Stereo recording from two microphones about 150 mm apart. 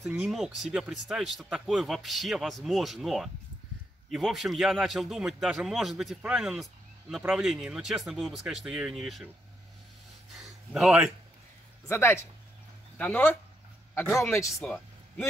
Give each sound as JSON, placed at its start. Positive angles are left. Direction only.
{"t": 0.0, "sound": "a man's voice", "side_deg": 0}
{"t": 10.3, "sound": "a sound", "side_deg": 0}
{"t": 11.9, "sound": "speech", "side_deg": 15}
{"t": 14.5, "sound": "speech", "side_deg": 5}